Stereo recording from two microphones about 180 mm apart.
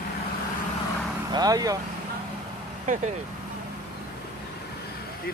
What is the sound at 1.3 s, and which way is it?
Speech, 20° right (ahead or behind).